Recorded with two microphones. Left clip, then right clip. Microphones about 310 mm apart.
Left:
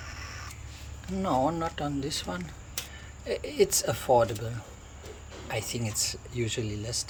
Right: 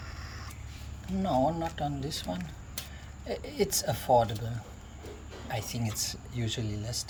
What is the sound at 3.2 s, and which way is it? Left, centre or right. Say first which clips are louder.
Speech: left 5 dB; centre.